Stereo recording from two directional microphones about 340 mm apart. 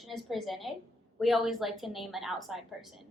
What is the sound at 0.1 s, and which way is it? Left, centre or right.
A woman's voice, centre.